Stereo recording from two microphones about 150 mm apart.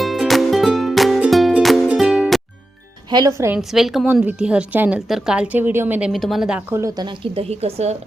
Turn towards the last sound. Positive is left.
turn(degrees=-45)  # may be behind; listen again after turning